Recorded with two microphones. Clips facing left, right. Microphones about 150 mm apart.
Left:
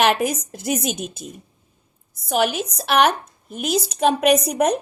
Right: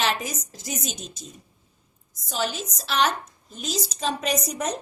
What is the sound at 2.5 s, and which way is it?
A woman's voice, 60° left (ahead or behind).